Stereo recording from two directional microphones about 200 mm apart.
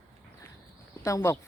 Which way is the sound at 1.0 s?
15° left (ahead or behind).